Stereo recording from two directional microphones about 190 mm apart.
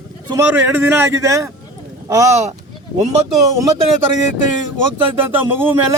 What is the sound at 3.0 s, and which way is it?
Speech, 35° right (ahead or behind).